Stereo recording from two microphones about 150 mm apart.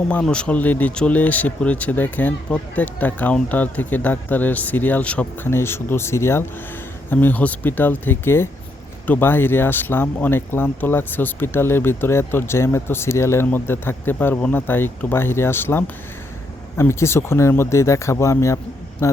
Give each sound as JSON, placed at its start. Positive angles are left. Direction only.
{"t": 0.1, "sound": "speech", "side_deg": 5}